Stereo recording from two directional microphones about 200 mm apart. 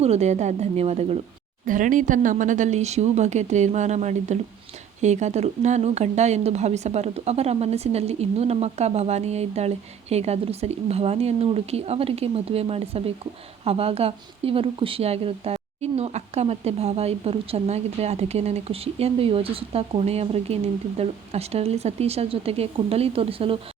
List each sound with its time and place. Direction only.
0.0 s speech: 35° right (ahead or behind)